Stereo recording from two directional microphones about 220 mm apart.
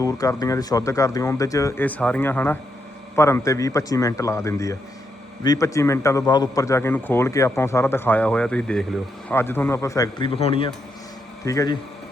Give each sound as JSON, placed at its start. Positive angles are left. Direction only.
{"t": 0.0, "sound": "a man's voice", "side_deg": 15}